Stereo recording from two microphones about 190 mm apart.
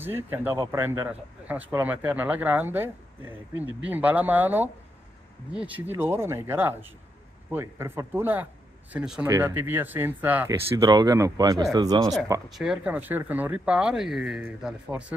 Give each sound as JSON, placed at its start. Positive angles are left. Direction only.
{"t": 0.0, "sound": "speech", "side_deg": -10}
{"t": 10.8, "sound": "speech", "side_deg": -20}
{"t": 12.4, "sound": "speech", "side_deg": 0}